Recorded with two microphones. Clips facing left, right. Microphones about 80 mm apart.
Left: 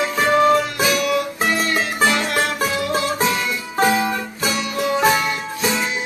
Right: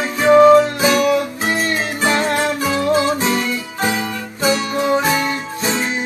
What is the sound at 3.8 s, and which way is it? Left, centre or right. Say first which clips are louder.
Music: left 5 dB; left.